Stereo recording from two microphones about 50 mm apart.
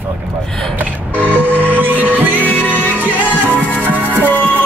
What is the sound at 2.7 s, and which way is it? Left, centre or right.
Music, left.